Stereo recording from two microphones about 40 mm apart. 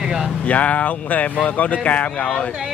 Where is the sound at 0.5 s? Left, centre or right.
Left.